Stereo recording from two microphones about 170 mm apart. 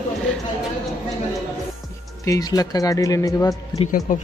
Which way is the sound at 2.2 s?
20° left (ahead or behind).